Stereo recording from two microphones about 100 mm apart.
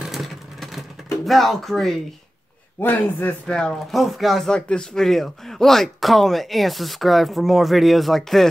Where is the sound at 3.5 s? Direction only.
5° left (ahead or behind).